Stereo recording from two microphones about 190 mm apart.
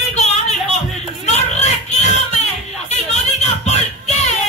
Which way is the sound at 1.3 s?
35° left (ahead or behind).